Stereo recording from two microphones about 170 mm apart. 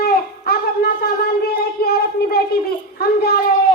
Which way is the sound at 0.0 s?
65° left (ahead or behind).